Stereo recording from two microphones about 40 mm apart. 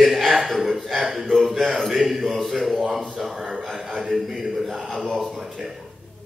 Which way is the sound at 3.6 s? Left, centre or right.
Centre.